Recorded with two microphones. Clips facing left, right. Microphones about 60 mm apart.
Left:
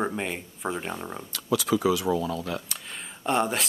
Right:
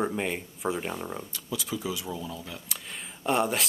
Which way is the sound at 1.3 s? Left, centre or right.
Left.